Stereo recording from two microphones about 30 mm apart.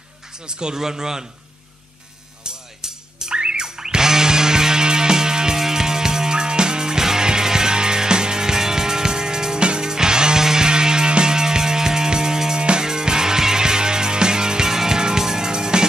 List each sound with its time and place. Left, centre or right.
0.5 s speech: right
2.4 s music: right